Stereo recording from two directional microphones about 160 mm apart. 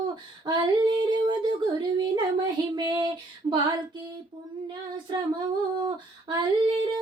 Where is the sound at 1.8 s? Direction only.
30° right (ahead or behind).